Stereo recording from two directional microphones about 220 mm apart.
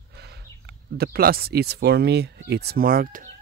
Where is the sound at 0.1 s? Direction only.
50° right (ahead or behind).